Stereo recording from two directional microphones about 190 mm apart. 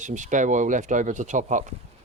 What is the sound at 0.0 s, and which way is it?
Speech, 40° right (ahead or behind).